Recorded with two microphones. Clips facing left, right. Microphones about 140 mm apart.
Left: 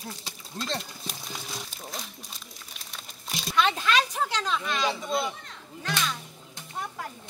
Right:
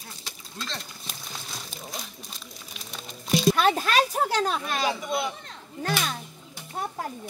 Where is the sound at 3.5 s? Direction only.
45° right (ahead or behind).